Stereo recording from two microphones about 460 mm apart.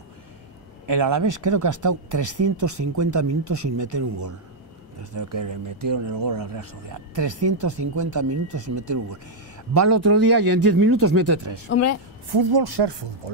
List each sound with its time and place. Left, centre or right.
0.8 s speech: right
11.7 s a woman's voice: left
12.3 s speech: right